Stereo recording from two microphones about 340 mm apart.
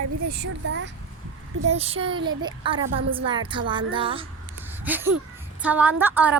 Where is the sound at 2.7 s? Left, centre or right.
Right.